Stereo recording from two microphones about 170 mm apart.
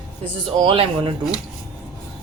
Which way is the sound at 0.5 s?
30° right (ahead or behind).